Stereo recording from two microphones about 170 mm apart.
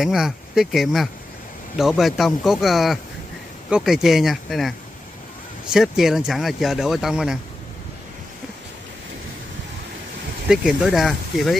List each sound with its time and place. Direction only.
0.0 s speech: 5° right (ahead or behind)
10.5 s speech: 5° right (ahead or behind)